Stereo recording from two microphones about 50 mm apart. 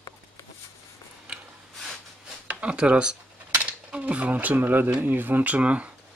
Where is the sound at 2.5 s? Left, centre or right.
Right.